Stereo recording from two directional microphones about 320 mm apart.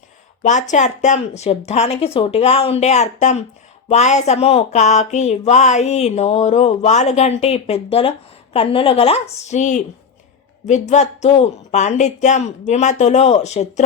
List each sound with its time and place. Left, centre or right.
0.4 s a woman's voice: left